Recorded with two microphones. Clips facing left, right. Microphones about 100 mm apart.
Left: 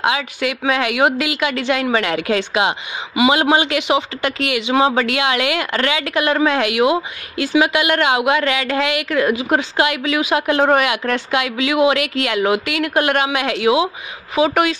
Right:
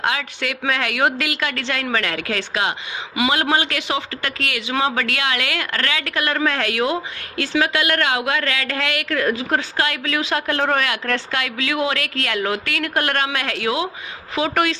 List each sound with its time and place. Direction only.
0.0 s speech: 10° left (ahead or behind)